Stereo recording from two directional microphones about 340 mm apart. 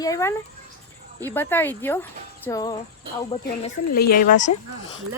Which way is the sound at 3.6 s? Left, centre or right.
Left.